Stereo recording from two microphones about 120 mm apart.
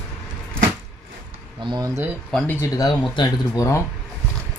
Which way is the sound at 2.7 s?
35° left (ahead or behind).